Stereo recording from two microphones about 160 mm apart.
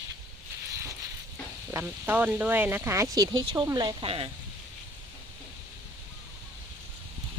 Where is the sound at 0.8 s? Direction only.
20° right (ahead or behind).